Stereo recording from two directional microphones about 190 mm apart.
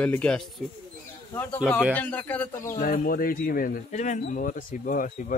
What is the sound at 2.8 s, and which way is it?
Speech, 50° left (ahead or behind).